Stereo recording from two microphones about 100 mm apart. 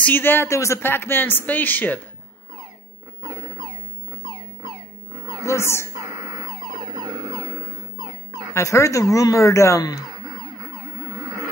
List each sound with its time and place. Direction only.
0.0 s speech: 20° left (ahead or behind)
5.4 s speech: 25° left (ahead or behind)
7.0 s music: 45° right (ahead or behind)
8.3 s speech: 30° left (ahead or behind)